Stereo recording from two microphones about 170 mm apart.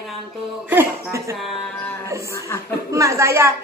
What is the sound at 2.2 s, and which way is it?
Speech, 15° left (ahead or behind).